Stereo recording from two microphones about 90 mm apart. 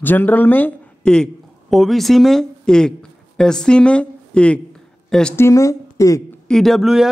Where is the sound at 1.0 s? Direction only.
10° left (ahead or behind).